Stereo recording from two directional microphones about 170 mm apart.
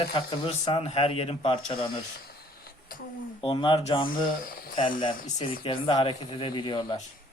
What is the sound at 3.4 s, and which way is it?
Speech, 30° left (ahead or behind).